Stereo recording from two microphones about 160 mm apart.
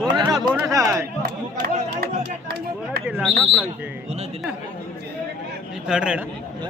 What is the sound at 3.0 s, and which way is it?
Bird, 5° right (ahead or behind).